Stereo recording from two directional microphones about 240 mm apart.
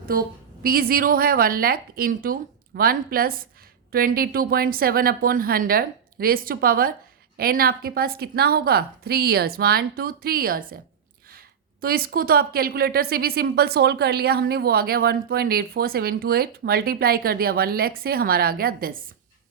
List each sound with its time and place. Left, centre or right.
0.0 s speech: right